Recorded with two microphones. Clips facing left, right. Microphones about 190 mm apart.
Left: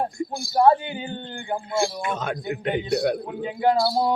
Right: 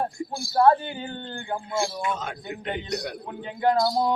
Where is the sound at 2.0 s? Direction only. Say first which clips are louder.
Left 2 dB; 65° left (ahead or behind).